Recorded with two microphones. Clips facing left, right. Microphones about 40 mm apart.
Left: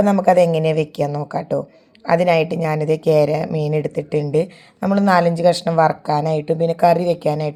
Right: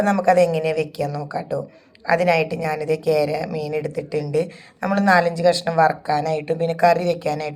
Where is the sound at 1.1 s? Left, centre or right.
Left.